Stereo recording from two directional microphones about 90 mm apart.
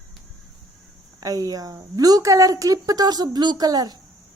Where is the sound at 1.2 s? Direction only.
40° right (ahead or behind).